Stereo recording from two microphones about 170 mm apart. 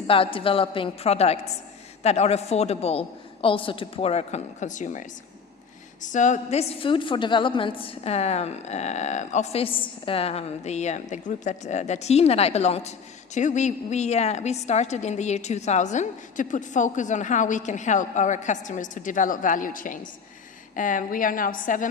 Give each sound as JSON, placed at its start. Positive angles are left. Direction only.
{"t": 0.1, "sound": "a woman's voice", "side_deg": 30}